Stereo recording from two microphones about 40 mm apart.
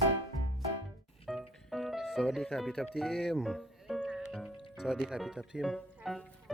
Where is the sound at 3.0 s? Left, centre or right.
Centre.